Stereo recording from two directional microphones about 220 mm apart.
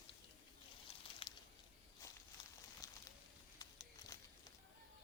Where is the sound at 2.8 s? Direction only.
15° left (ahead or behind).